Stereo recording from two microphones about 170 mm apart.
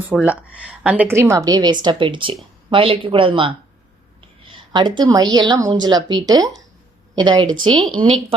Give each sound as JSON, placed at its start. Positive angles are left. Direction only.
{"t": 0.1, "sound": "a woman's voice", "side_deg": 0}